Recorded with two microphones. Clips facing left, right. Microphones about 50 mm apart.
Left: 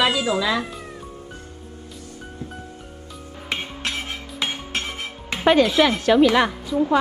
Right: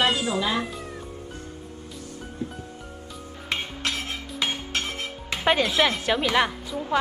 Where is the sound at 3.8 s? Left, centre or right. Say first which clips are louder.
Left 1 dB; left.